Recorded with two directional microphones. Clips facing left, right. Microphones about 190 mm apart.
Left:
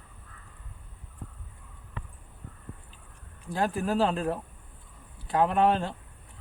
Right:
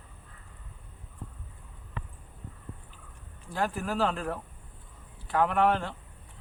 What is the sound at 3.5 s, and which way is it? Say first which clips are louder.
Speech: left 3 dB; 20° left (ahead or behind).